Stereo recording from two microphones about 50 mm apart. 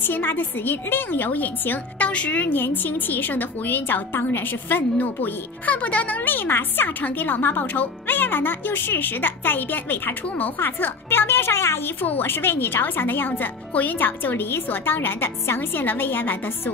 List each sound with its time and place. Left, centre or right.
0.0 s a woman's voice: left
2.0 s a woman's voice: left
6.2 s a woman's voice: left
10.2 s a woman's voice: left
10.6 s speech: left